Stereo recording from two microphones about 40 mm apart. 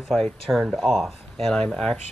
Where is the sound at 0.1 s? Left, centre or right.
Centre.